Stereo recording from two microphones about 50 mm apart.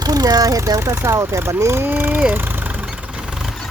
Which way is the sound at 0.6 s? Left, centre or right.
Right.